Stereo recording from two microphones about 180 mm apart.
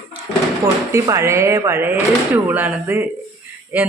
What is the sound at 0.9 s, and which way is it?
Speech, 15° right (ahead or behind).